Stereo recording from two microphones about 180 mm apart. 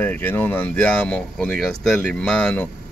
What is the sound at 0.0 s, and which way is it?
Speech, 10° left (ahead or behind).